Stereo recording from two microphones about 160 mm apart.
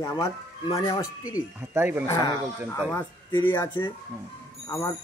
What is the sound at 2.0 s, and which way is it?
Speech, 20° left (ahead or behind).